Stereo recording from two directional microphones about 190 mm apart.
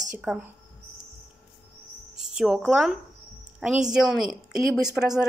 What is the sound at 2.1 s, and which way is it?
A woman's voice, 5° right (ahead or behind).